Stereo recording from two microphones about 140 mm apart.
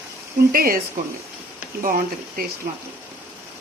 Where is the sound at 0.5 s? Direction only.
90° right.